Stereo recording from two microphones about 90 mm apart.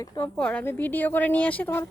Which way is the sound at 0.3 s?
10° left (ahead or behind).